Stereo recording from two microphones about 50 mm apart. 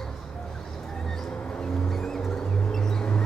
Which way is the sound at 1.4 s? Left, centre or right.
Left.